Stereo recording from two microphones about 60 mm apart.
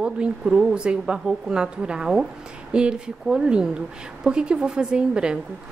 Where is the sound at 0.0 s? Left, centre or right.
Centre.